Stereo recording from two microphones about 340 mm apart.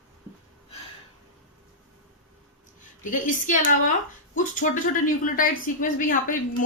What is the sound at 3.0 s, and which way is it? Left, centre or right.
A woman's voice, left.